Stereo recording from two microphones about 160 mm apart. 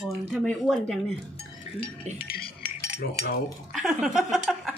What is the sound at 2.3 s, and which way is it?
Cutlery, 65° left (ahead or behind).